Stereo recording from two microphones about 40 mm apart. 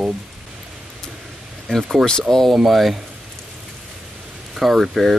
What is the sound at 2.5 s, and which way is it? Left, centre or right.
Speech, centre.